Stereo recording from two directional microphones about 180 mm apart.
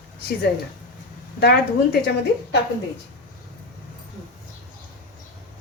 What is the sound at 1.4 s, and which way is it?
Speech, 60° left (ahead or behind).